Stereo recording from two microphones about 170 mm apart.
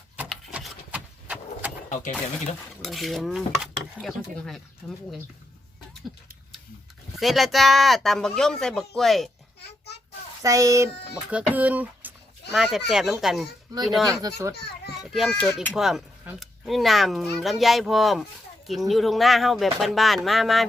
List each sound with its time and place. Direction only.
0.2 s vehicle: 5° right (ahead or behind)
1.9 s speech: 45° left (ahead or behind)
2.8 s speech: centre (ahead or behind)
7.2 s speech: centre (ahead or behind)
10.4 s a child's voice: 20° right (ahead or behind)
11.3 s a sound: 10° right (ahead or behind)
12.9 s speech: centre (ahead or behind)
14.1 s a child's voice: 20° right (ahead or behind)
15.1 s speech: 5° left (ahead or behind)